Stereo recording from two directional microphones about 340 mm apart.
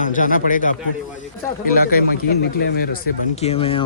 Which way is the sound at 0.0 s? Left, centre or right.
Left.